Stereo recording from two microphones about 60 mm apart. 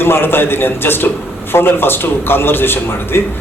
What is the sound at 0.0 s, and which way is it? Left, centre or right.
Speech, left.